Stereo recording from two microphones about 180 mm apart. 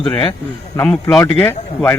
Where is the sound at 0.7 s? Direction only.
10° left (ahead or behind).